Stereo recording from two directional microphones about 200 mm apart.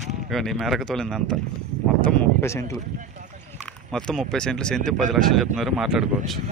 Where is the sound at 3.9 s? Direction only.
Centre (ahead or behind).